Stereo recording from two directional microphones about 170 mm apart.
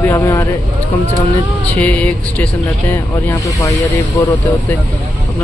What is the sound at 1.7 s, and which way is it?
Speech, 10° left (ahead or behind).